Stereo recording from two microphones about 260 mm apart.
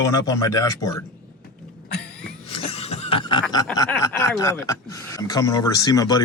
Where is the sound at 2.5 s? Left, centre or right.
Left.